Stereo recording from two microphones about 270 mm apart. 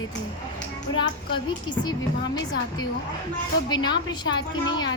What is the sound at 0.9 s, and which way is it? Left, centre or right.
A woman's voice, centre.